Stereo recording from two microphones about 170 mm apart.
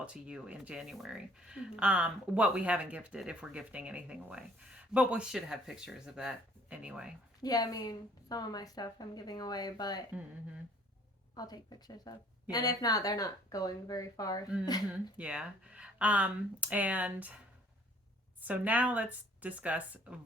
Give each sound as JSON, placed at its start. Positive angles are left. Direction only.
{"t": 0.0, "sound": "speech", "side_deg": -5}
{"t": 7.4, "sound": "a woman's voice", "side_deg": 20}
{"t": 11.3, "sound": "a woman's voice", "side_deg": 25}
{"t": 15.2, "sound": "speech", "side_deg": -5}
{"t": 18.3, "sound": "speech", "side_deg": -10}